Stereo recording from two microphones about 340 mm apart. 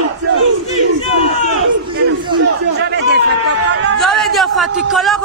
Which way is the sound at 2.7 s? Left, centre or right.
Right.